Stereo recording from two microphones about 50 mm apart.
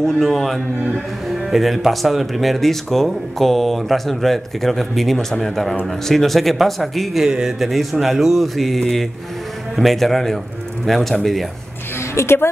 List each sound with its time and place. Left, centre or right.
0.0 s speech: centre
12.0 s a woman's voice: left